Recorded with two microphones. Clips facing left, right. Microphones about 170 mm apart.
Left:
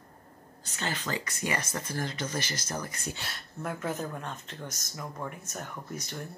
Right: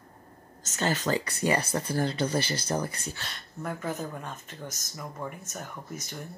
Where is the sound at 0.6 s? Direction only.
40° right (ahead or behind).